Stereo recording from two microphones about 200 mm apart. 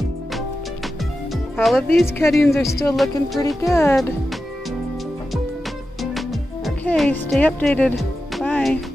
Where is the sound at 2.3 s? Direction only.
15° left (ahead or behind).